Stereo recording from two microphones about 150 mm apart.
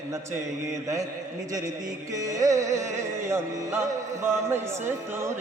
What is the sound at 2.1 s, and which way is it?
Music, 20° right (ahead or behind).